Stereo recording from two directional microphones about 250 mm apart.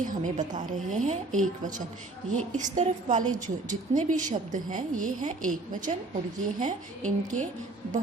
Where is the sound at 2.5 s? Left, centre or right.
Right.